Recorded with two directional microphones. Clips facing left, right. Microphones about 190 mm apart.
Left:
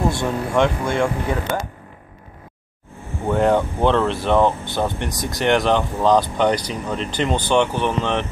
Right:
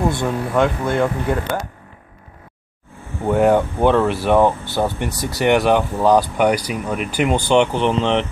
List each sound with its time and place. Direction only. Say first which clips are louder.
0.2 s speech: right 1 dB; 5° right (ahead or behind)
3.3 s speech: right 3 dB; 10° right (ahead or behind)